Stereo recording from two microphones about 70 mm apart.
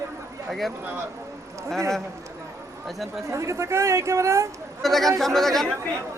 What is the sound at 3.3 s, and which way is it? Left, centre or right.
Speech, right.